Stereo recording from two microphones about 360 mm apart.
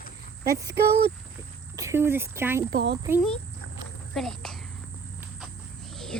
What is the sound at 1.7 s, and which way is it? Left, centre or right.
Speech, centre.